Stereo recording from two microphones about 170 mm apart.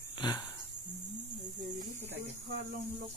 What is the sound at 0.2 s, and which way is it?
Speech, 25° left (ahead or behind).